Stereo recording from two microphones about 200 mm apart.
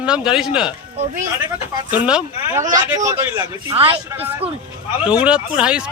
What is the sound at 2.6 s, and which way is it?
Speech, 15° right (ahead or behind).